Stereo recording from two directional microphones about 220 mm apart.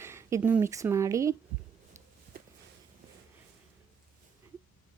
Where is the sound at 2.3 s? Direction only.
40° right (ahead or behind).